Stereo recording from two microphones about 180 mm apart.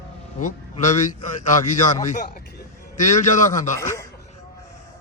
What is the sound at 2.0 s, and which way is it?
A man's voice, 45° left (ahead or behind).